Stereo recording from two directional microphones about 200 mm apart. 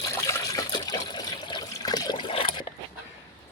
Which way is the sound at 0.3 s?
15° left (ahead or behind).